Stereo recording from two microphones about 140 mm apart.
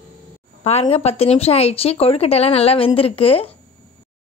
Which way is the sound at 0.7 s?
45° left (ahead or behind).